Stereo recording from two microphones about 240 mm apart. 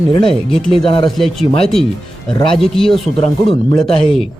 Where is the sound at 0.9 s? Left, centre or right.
Left.